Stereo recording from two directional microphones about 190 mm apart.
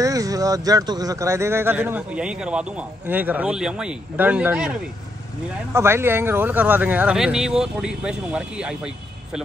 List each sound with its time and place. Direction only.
0.0 s speech: 20° right (ahead or behind)